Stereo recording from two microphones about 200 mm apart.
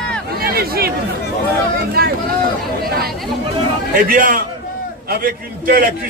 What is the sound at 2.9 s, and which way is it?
A man's voice, 50° right (ahead or behind).